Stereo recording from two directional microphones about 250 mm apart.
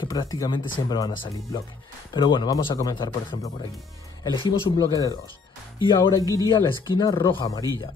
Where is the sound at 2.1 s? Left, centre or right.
Centre.